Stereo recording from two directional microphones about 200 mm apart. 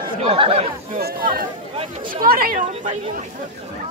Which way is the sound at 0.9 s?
50° right (ahead or behind).